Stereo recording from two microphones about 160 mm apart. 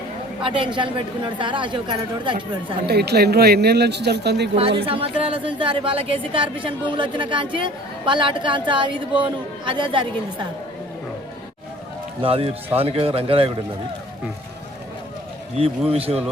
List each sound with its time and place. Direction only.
0.4 s a woman's voice: 30° right (ahead or behind)
2.8 s speech: 90° right
4.9 s a woman's voice: 35° right (ahead or behind)
12.2 s a woman's voice: 35° right (ahead or behind)
15.9 s a woman's voice: 35° right (ahead or behind)